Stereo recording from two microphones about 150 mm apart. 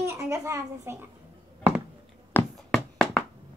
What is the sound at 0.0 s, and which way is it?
Speech, 20° right (ahead or behind).